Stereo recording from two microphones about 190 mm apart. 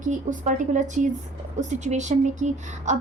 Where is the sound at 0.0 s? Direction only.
40° right (ahead or behind).